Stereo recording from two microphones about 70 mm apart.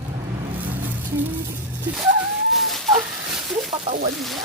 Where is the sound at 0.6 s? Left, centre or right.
Right.